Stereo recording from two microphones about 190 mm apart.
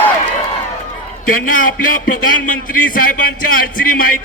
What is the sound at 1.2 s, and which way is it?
A man's voice, 45° left (ahead or behind).